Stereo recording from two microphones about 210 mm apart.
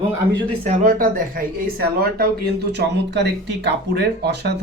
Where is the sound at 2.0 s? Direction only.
50° right (ahead or behind).